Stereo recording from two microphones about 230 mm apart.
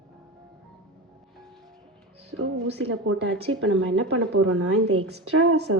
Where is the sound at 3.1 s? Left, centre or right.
Right.